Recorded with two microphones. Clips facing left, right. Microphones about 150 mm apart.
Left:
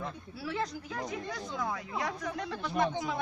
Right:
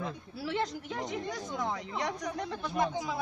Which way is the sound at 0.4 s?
25° right (ahead or behind).